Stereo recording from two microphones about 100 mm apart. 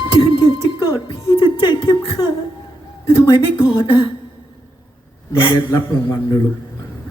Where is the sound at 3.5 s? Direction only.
60° left (ahead or behind).